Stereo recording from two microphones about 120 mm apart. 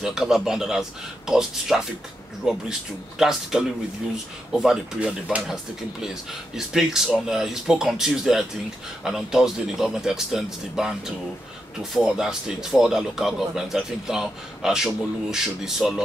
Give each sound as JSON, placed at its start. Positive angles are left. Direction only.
{"t": 0.0, "sound": "speech", "side_deg": -5}